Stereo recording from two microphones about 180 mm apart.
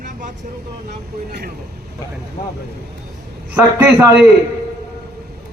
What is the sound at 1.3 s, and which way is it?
Speech, 60° right (ahead or behind).